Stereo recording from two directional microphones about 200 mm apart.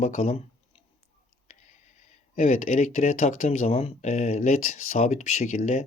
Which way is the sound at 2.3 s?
35° left (ahead or behind).